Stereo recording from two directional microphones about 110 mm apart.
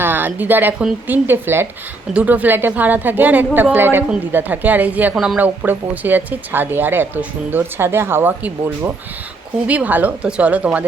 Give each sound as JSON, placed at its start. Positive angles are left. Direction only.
{"t": 0.0, "sound": "a woman's voice", "side_deg": -20}
{"t": 5.1, "sound": "speech", "side_deg": 0}
{"t": 5.4, "sound": "speech", "side_deg": -15}